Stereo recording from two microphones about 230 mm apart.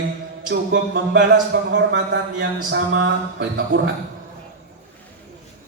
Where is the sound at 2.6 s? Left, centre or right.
Right.